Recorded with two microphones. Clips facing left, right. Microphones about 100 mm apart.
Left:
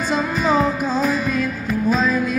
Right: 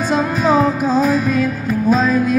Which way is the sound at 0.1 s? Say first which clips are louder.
Right 4 dB; 45° right (ahead or behind).